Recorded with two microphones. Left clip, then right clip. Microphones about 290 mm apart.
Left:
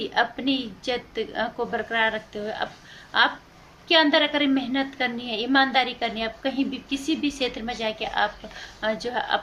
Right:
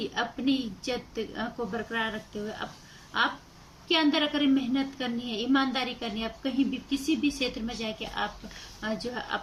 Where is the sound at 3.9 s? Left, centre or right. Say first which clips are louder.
Left 7 dB; centre.